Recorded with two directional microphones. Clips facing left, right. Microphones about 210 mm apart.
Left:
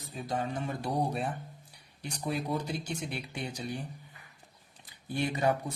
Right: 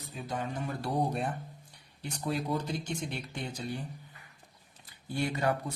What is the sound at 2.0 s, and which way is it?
Speech, 15° left (ahead or behind).